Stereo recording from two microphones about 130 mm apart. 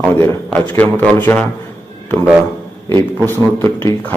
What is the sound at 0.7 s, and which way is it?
Speech, 10° left (ahead or behind).